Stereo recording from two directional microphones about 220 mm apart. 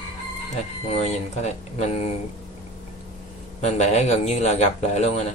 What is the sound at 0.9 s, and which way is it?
Speech, 30° left (ahead or behind).